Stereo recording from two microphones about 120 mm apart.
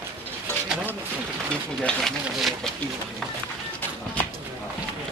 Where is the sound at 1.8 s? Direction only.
5° left (ahead or behind).